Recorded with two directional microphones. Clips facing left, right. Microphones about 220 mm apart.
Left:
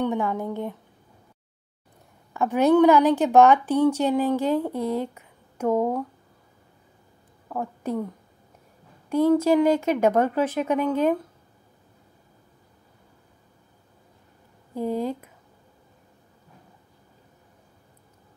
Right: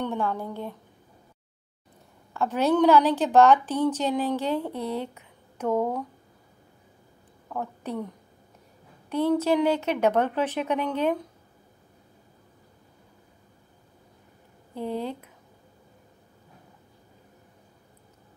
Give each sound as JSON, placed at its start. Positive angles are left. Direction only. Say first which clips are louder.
{"t": 0.0, "sound": "a woman's voice", "louder": "left 4 dB", "side_deg": 15}
{"t": 2.3, "sound": "a woman's voice", "louder": "left 5 dB", "side_deg": 15}
{"t": 7.4, "sound": "a woman's voice", "louder": "left 4 dB", "side_deg": 10}
{"t": 9.1, "sound": "a woman's voice", "louder": "left 4 dB", "side_deg": 10}
{"t": 14.8, "sound": "a woman's voice", "louder": "left 4 dB", "side_deg": 10}